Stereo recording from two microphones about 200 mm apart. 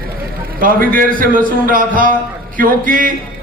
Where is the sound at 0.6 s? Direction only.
45° right (ahead or behind).